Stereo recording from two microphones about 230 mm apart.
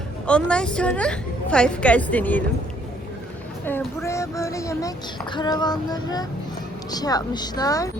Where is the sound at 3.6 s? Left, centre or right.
Centre.